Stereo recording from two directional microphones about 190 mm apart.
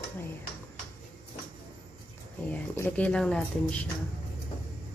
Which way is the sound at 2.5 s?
10° left (ahead or behind).